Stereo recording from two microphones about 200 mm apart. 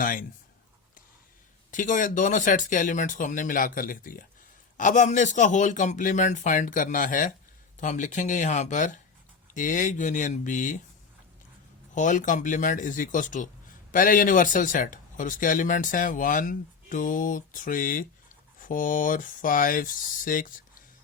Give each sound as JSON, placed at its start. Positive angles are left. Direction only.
{"t": 0.0, "sound": "speech", "side_deg": 45}
{"t": 1.7, "sound": "speech", "side_deg": 40}
{"t": 11.9, "sound": "speech", "side_deg": 40}